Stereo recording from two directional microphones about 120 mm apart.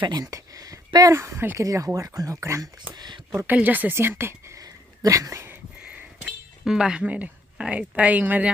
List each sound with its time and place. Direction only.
0.0 s speech: 35° right (ahead or behind)
2.9 s speech: 40° right (ahead or behind)
3.3 s a woman's voice: 15° right (ahead or behind)
5.9 s a sound: 10° right (ahead or behind)